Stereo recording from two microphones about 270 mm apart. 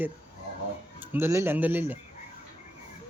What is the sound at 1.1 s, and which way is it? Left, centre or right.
Speech, centre.